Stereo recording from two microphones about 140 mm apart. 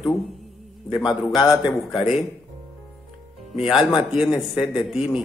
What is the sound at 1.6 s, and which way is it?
Speech, 35° left (ahead or behind).